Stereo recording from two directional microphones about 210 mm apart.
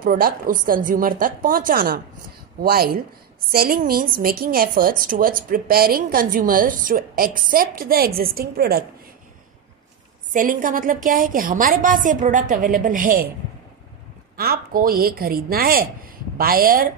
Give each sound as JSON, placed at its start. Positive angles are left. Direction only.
{"t": 0.0, "sound": "a woman's voice", "side_deg": -40}
{"t": 10.3, "sound": "a woman's voice", "side_deg": -40}
{"t": 14.3, "sound": "a woman's voice", "side_deg": -45}